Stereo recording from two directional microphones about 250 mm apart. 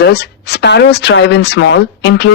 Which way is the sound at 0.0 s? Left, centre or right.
Left.